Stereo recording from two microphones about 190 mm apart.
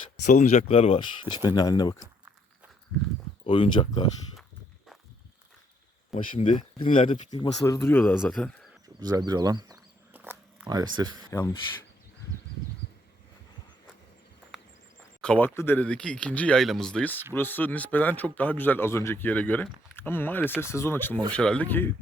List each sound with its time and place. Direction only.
0.3 s speech: 40° left (ahead or behind); by 2.0 s 20° left (ahead or behind)
3.4 s speech: 30° left (ahead or behind)
6.1 s speech: centre (ahead or behind)
6.7 s speech: 30° left (ahead or behind); by 8.5 s centre (ahead or behind)
9.0 s a sound: 20° right (ahead or behind)
10.9 s speech: 20° right (ahead or behind)
11.3 s speech: 15° left (ahead or behind)
15.2 s speech: 5° left (ahead or behind)